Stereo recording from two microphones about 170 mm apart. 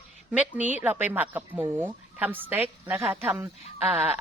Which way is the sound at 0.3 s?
10° right (ahead or behind).